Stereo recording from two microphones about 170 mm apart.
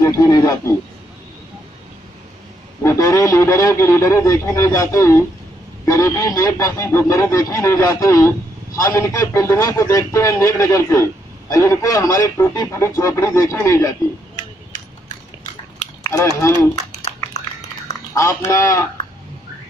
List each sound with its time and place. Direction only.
0.0 s speech: 20° left (ahead or behind)
2.8 s a man's voice: 15° left (ahead or behind)
16.0 s run: 20° left (ahead or behind)
18.1 s a man's voice: 15° left (ahead or behind)